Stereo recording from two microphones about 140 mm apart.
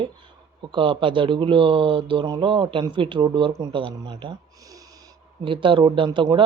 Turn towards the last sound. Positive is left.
turn(degrees=-35)  # may be behind; listen again after turning